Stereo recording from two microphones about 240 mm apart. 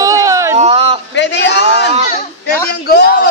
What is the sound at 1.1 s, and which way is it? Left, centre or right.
A man's voice, left.